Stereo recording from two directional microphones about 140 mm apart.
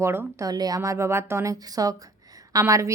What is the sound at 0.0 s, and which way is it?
Speech, 20° right (ahead or behind).